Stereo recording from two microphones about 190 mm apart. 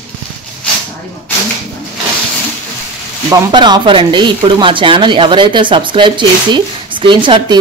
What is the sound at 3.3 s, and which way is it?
Speech, 25° right (ahead or behind).